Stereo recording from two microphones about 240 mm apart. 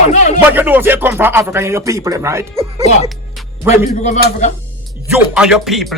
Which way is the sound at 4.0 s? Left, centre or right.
Left.